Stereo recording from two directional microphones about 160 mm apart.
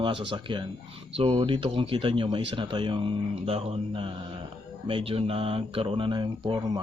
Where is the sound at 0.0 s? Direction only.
30° right (ahead or behind).